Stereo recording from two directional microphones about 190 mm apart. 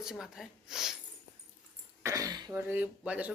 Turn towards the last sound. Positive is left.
turn(degrees=-5)  # may be behind; listen again after turning